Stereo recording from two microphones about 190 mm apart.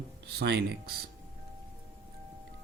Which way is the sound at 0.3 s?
60° right (ahead or behind).